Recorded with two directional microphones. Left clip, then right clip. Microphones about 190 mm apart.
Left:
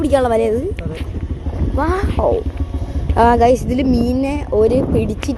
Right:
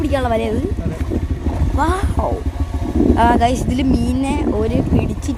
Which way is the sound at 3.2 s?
15° left (ahead or behind).